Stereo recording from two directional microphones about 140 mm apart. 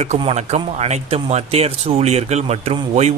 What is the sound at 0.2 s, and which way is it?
Speech, 50° right (ahead or behind).